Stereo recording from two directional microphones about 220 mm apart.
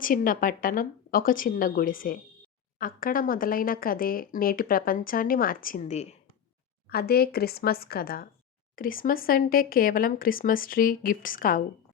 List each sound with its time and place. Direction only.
0.0 s speech: 40° left (ahead or behind)
6.9 s speech: 45° left (ahead or behind)